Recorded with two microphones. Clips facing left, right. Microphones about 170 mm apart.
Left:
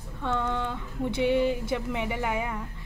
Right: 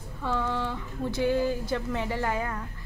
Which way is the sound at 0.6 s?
20° left (ahead or behind).